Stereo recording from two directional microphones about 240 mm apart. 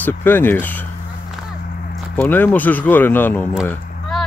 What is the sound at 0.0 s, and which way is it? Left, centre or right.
Speech, centre.